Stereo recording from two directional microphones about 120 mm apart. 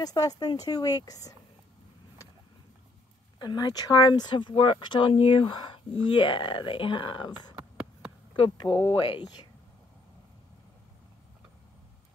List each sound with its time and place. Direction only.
0.0 s speech: 30° left (ahead or behind)
3.3 s speech: 35° left (ahead or behind)
7.5 s a sound: 10° right (ahead or behind)
8.4 s speech: 35° left (ahead or behind)
8.9 s speech: 45° left (ahead or behind)